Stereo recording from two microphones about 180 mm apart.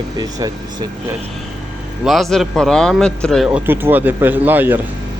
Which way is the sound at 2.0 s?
Centre (ahead or behind).